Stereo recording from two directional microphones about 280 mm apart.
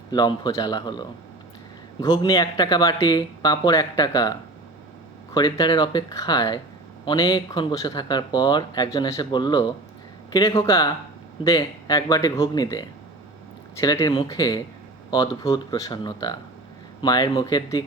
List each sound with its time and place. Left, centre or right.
0.1 s speech: centre